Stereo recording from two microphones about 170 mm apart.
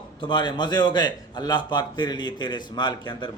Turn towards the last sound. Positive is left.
turn(degrees=25)  # may be behind; listen again after turning